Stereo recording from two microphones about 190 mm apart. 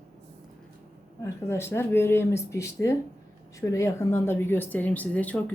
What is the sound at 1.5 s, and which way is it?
Speech, 15° left (ahead or behind).